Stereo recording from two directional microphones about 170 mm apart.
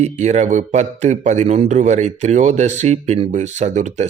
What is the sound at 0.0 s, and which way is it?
A man's voice, 40° right (ahead or behind).